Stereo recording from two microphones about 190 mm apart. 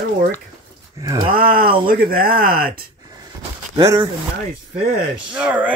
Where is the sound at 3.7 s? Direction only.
15° right (ahead or behind).